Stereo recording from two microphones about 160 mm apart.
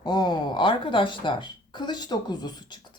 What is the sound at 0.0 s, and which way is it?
Speech, 25° left (ahead or behind).